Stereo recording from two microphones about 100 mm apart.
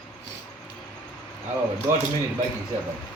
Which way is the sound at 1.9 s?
25° right (ahead or behind).